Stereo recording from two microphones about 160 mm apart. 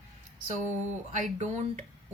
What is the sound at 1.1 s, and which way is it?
Speech, 50° right (ahead or behind).